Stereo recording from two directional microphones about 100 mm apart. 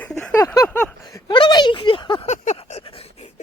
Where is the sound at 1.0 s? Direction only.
50° left (ahead or behind); by 3.3 s 80° left.